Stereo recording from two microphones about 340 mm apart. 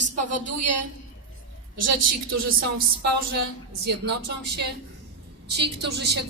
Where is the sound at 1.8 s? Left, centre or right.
Right.